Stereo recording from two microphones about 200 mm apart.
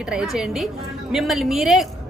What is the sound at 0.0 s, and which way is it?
A woman's voice, 5° right (ahead or behind).